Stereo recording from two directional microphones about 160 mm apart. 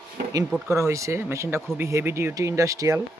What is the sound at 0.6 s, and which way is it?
Speech, 20° right (ahead or behind).